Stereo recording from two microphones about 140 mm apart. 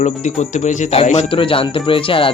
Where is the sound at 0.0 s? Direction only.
60° left (ahead or behind).